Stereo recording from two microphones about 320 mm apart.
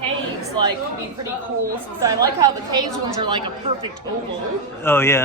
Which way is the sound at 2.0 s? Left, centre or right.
Centre.